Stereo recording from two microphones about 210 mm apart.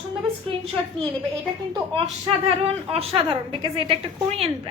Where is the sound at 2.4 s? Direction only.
25° right (ahead or behind).